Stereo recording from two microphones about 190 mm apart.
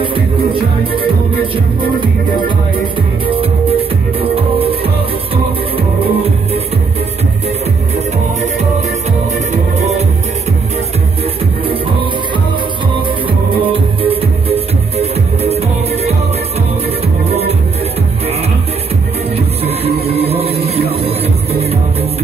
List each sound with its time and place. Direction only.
0.0 s music: 25° right (ahead or behind)
3.3 s music: 30° right (ahead or behind)
9.5 s music: 35° right (ahead or behind)
13.6 s music: 30° right (ahead or behind)
17.3 s music: 35° right (ahead or behind)
19.3 s music: 30° right (ahead or behind)